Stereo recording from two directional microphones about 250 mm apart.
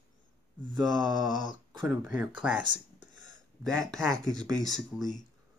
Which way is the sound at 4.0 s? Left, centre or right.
Centre.